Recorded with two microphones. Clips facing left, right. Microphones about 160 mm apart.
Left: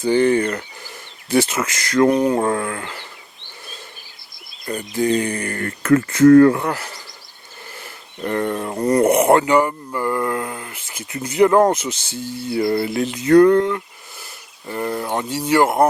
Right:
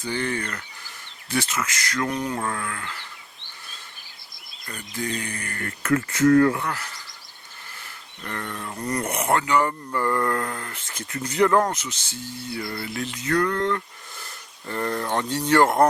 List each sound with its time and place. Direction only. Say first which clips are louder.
0.0 s speech: left 12 dB; 25° left (ahead or behind)
4.7 s speech: left 11 dB; 25° left (ahead or behind)
6.7 s music: left 6 dB; 30° left (ahead or behind)
8.2 s speech: left 12 dB; 25° left (ahead or behind)
8.4 s speech: left 9 dB; 35° left (ahead or behind)
9.6 s speech: left 4 dB; 10° left (ahead or behind)
12.5 s music: left 14 dB; 35° left (ahead or behind)
13.0 s speech: left 12 dB; 25° left (ahead or behind)
13.6 s a sound: left 5 dB; 10° left (ahead or behind)
14.7 s speech: left 3 dB; 10° left (ahead or behind)